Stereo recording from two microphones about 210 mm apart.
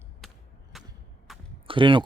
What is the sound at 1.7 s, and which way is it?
Speech, 25° right (ahead or behind).